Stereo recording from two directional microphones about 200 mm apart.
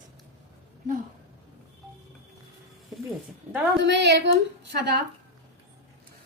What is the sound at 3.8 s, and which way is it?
A woman's voice, 60° right (ahead or behind).